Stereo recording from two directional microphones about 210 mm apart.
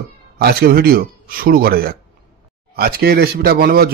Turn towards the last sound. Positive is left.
turn(degrees=-45)  # may be behind; listen again after turning